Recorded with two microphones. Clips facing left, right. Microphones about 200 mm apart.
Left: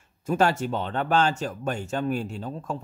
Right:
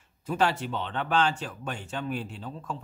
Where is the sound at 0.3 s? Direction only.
45° left (ahead or behind).